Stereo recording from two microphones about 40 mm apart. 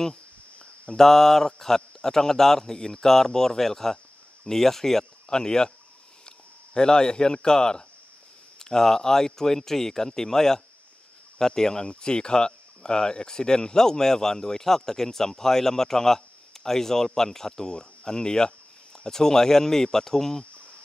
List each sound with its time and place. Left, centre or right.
0.9 s speech: centre